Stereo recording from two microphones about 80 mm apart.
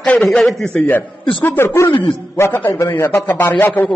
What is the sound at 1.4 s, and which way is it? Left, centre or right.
A man's voice, left.